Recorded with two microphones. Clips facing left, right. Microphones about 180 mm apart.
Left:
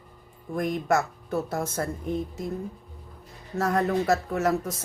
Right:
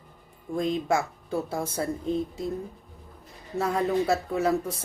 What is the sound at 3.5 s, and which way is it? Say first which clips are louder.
Speech: left 1 dB; 10° right (ahead or behind).